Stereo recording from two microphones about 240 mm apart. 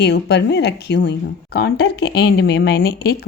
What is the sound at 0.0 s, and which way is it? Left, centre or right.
A woman's voice, left.